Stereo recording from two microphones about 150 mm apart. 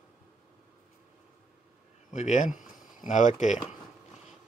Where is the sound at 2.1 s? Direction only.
50° left (ahead or behind).